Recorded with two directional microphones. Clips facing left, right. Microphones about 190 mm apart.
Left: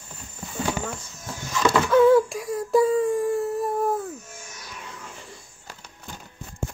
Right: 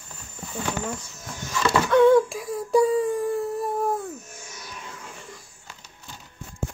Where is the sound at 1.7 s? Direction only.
5° left (ahead or behind).